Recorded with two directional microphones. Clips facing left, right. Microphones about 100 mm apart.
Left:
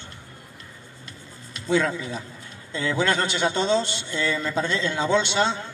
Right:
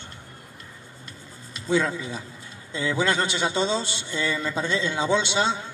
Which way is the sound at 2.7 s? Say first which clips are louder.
Left 1 dB; 15° right (ahead or behind).